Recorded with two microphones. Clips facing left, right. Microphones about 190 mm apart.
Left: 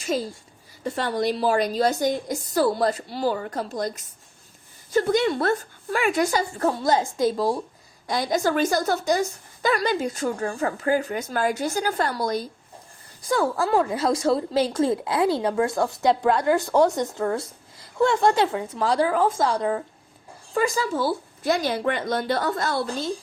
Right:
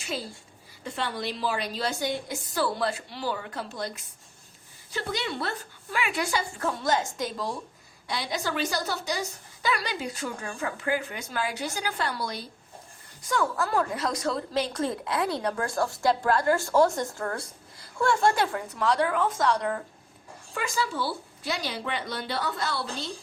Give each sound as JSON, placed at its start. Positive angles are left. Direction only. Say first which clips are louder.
{"t": 0.9, "sound": "a woman's voice", "louder": "left 8 dB", "side_deg": 45}
{"t": 20.5, "sound": "a woman's voice", "louder": "left 7 dB", "side_deg": 40}